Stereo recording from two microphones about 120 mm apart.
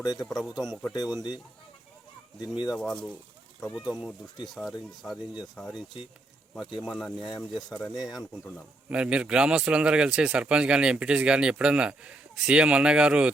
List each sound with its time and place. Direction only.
0.2 s speech: centre (ahead or behind)
0.9 s speech: 35° left (ahead or behind)
2.4 s speech: 35° left (ahead or behind)
2.7 s speech: 5° left (ahead or behind)
7.2 s speech: 35° left (ahead or behind)
7.5 s a man's voice: centre (ahead or behind)